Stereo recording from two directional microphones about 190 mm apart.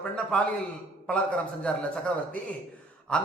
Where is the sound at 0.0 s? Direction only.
5° left (ahead or behind).